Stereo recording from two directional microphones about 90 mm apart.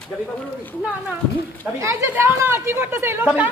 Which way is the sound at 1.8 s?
30° right (ahead or behind).